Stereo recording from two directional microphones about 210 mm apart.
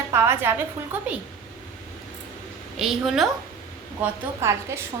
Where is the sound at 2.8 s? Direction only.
Centre (ahead or behind).